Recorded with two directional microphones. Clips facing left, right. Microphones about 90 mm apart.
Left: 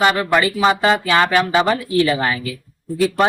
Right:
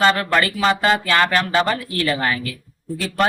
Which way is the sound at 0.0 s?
15° left (ahead or behind).